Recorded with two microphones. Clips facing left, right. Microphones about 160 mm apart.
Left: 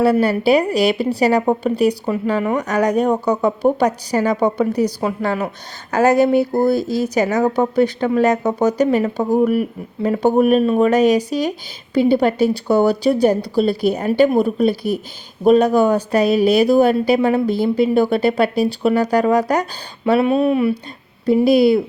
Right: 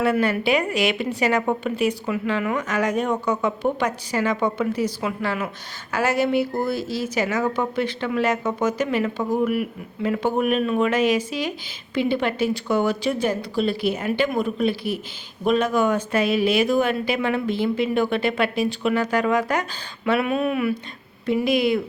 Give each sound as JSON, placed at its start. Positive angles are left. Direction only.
{"t": 0.0, "sound": "speech", "side_deg": 35}